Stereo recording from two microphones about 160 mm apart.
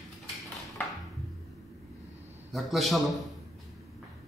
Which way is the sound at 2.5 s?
Centre (ahead or behind).